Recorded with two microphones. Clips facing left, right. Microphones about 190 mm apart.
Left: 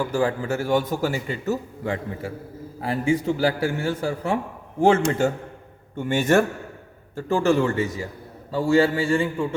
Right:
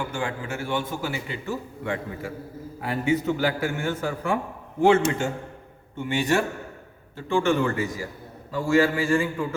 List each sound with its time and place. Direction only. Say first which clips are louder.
0.1 s a man's voice: left 7 dB; 35° left (ahead or behind)